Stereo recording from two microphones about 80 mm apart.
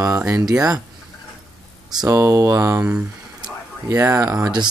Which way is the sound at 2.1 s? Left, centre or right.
Right.